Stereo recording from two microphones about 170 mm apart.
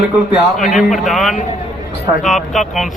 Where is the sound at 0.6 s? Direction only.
Centre (ahead or behind).